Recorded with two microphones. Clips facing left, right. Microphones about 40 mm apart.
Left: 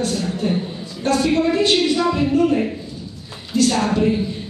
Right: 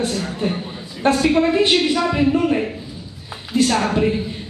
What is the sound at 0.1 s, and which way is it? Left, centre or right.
A woman's voice, centre.